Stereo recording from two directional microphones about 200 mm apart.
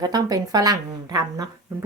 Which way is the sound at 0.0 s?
20° right (ahead or behind).